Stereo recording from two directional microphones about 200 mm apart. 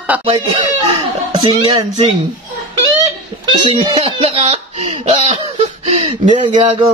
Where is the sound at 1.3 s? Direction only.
25° right (ahead or behind).